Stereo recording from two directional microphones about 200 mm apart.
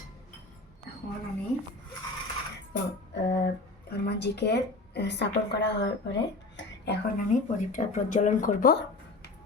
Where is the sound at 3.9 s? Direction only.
55° left (ahead or behind).